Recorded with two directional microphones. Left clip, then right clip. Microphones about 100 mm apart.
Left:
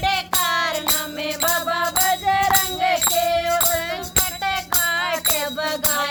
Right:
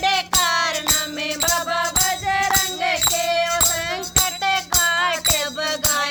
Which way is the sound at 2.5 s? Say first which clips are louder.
Left 1 dB; 15° left (ahead or behind).